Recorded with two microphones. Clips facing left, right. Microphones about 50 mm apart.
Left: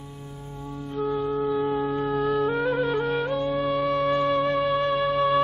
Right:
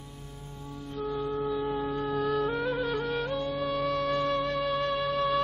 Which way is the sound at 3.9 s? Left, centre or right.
Centre.